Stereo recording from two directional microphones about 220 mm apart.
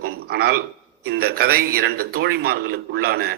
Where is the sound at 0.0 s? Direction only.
45° right (ahead or behind).